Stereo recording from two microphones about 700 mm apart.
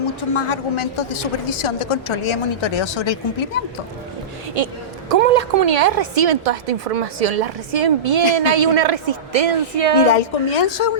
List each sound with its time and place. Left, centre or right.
0.3 s a woman's voice: left
4.5 s a woman's voice: right
10.0 s a woman's voice: left